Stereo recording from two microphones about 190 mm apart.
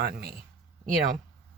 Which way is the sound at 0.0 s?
55° right (ahead or behind).